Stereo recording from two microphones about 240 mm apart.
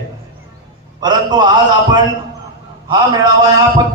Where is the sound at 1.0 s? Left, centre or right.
Centre.